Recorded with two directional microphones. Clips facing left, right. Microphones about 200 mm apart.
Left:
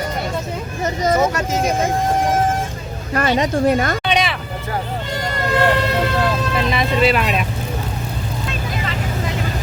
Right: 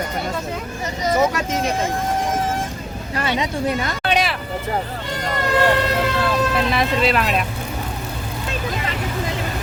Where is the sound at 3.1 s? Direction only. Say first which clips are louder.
Left 5 dB; 50° left (ahead or behind).